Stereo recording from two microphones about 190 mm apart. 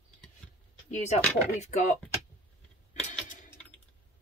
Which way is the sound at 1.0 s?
40° left (ahead or behind).